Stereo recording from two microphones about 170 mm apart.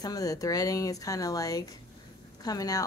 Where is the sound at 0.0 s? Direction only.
20° left (ahead or behind).